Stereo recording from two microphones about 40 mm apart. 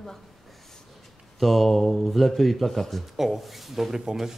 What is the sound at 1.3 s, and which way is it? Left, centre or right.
Speech, centre.